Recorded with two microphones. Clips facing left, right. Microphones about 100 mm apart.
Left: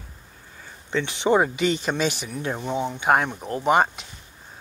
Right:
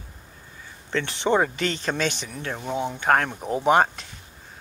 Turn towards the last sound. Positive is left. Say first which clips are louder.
# right 1 dB
turn(degrees=0)  # may be behind; listen again after turning